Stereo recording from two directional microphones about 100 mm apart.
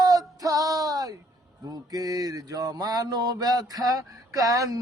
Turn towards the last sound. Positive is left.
turn(degrees=-35)  # may be behind; listen again after turning